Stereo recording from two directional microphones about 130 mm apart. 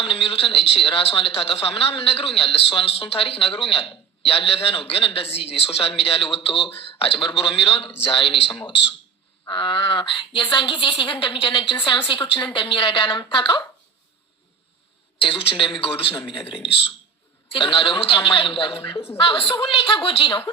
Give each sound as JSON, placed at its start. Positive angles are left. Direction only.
{"t": 0.0, "sound": "a woman's voice", "side_deg": 40}
{"t": 15.2, "sound": "a woman's voice", "side_deg": 45}